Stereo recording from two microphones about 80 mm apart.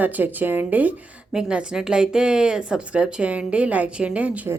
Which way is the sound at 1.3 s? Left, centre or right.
Centre.